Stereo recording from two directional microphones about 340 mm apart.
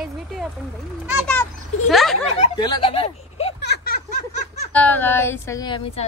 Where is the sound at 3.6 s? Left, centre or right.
Left.